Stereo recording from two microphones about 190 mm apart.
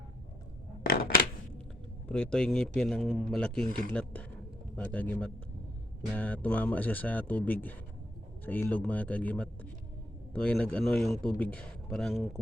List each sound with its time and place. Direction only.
0.8 s scissors: 50° left (ahead or behind)
2.0 s speech: 5° left (ahead or behind)